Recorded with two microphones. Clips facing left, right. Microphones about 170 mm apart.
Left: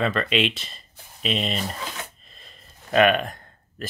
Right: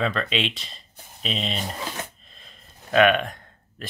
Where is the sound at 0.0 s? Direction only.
Centre (ahead or behind).